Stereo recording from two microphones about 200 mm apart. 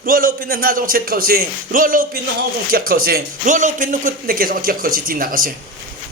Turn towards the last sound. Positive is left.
turn(degrees=-45)  # may be behind; listen again after turning